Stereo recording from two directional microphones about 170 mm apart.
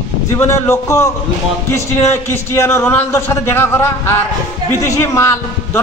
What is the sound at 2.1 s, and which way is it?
A man's voice, 15° left (ahead or behind).